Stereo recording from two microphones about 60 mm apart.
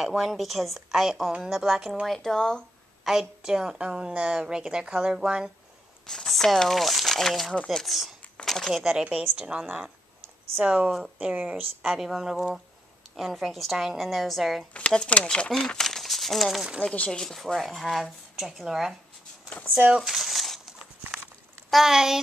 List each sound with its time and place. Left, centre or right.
0.0 s speech: centre
3.1 s a woman's voice: centre
6.0 s speech: centre
8.8 s a woman's voice: centre
11.8 s a woman's voice: centre
13.1 s speech: centre
15.0 s speech: centre
16.8 s speech: centre
17.3 s speech: centre
20.0 s a sound: centre
21.8 s a woman's voice: centre